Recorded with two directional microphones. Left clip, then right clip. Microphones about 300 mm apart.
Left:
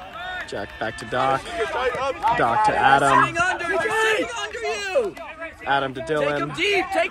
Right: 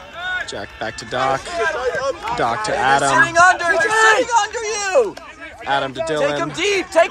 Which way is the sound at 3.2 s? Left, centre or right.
Centre.